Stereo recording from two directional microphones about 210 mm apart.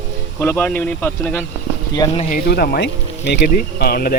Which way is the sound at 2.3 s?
45° left (ahead or behind).